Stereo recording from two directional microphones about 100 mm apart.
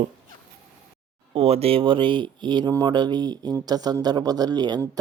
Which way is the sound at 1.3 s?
90° right.